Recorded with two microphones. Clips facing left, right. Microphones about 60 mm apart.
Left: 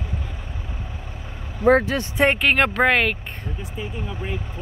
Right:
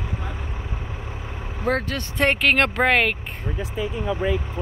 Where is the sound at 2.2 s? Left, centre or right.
Centre.